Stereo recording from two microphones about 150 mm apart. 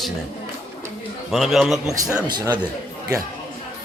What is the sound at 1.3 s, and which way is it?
Speech, centre (ahead or behind).